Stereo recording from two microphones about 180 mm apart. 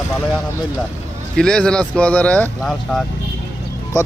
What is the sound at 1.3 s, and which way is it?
Speech, 5° left (ahead or behind).